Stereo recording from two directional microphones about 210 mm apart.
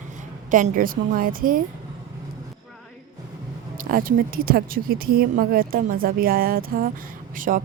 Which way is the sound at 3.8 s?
45° right (ahead or behind).